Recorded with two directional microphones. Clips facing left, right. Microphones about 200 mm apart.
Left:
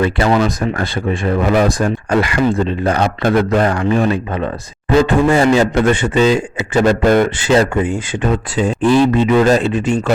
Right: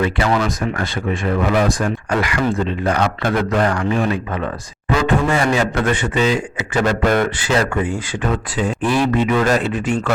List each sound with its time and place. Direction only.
0.0 s a man's voice: 30° left (ahead or behind)